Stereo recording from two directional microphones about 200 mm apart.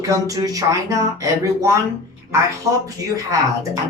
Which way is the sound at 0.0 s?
15° right (ahead or behind).